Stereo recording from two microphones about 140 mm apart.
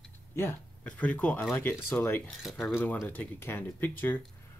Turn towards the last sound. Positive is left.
turn(degrees=15)  # may be behind; listen again after turning